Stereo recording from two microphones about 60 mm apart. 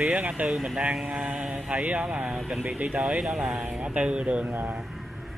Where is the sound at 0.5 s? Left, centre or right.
Centre.